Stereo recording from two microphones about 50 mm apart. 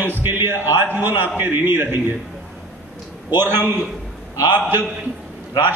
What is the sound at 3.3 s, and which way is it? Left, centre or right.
Speech, right.